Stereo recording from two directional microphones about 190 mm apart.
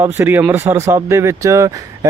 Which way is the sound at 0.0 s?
10° right (ahead or behind).